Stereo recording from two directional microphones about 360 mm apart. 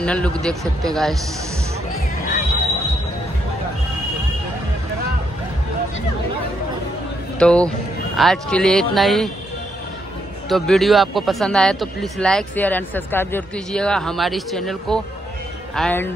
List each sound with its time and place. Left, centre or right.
0.0 s a man's voice: centre
7.3 s speech: centre
10.5 s speech: centre